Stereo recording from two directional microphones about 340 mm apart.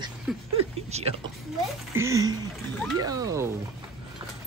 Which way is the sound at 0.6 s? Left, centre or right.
Centre.